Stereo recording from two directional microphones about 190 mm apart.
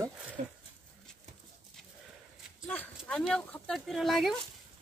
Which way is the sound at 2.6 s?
10° left (ahead or behind).